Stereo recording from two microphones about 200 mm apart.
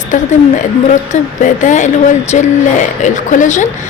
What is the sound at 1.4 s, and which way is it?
Speech, 40° left (ahead or behind).